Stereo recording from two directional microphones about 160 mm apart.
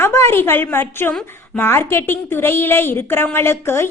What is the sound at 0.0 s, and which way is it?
A woman's voice, 15° left (ahead or behind).